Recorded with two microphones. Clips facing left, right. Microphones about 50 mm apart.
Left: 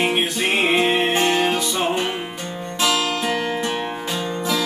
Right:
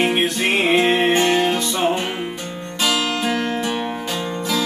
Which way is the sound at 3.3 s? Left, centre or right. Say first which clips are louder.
Right 1 dB; centre.